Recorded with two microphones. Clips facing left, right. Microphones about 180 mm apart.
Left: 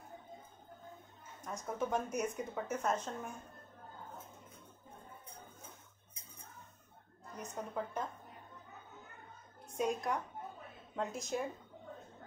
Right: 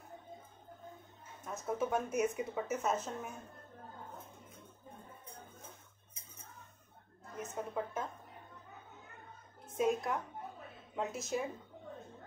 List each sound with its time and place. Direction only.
1.4 s speech: 5° right (ahead or behind)
7.3 s speech: 5° right (ahead or behind)
9.8 s speech: 5° right (ahead or behind)